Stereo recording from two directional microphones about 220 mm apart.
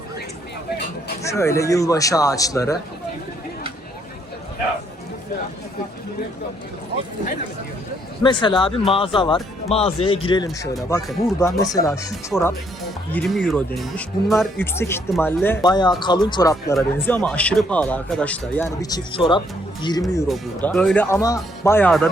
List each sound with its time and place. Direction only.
1.2 s speech: 15° left (ahead or behind)
8.2 s speech: 20° left (ahead or behind); by 14.4 s centre (ahead or behind)
14.6 s speech: 10° left (ahead or behind)
20.2 s speech: 5° left (ahead or behind)